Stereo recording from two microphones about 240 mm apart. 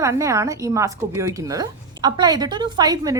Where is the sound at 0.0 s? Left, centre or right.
Centre.